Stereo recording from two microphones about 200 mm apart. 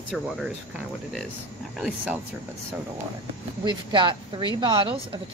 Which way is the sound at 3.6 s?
25° right (ahead or behind).